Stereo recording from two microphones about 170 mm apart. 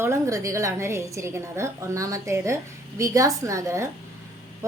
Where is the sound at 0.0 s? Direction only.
20° right (ahead or behind).